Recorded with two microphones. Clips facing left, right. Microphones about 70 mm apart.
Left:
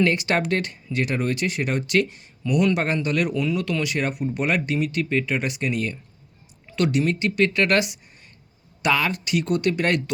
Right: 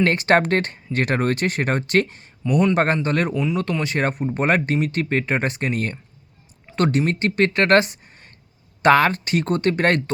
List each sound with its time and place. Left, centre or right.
0.0 s speech: right